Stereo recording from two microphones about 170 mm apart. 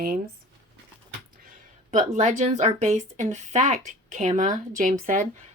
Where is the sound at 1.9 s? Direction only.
45° right (ahead or behind).